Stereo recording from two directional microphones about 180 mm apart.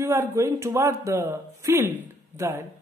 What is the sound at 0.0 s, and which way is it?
A woman's voice, 15° right (ahead or behind).